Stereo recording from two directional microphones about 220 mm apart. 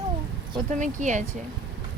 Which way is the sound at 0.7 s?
35° right (ahead or behind).